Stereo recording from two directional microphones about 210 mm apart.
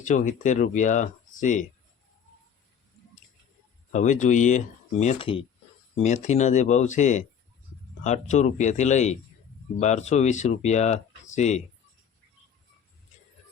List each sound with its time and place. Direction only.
0.0 s speech: 35° left (ahead or behind)
3.9 s speech: 35° left (ahead or behind)